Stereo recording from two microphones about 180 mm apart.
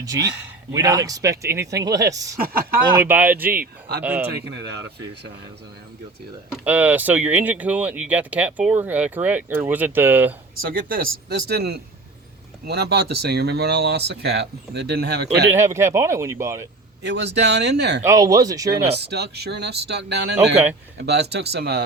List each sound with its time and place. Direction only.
0.7 s speech: 20° right (ahead or behind)
2.4 s speech: 55° right (ahead or behind)
2.9 s speech: 10° right (ahead or behind)
4.3 s speech: 70° right (ahead or behind)
6.7 s speech: 10° right (ahead or behind)
10.6 s speech: 55° right (ahead or behind)
15.5 s speech: 15° right (ahead or behind)
17.0 s speech: 70° right (ahead or behind)
18.0 s speech: 20° right (ahead or behind)
18.7 s speech: 65° right (ahead or behind)
20.3 s speech: 10° right (ahead or behind)
21.0 s speech: 65° right (ahead or behind)